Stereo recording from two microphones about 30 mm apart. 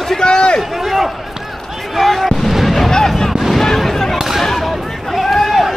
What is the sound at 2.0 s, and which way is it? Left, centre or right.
Speech, centre.